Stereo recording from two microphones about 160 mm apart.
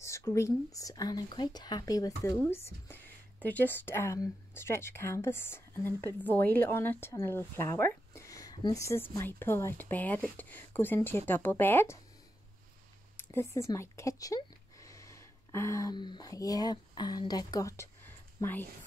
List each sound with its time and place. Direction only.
0.0 s speech: 20° left (ahead or behind)
13.2 s speech: 15° left (ahead or behind)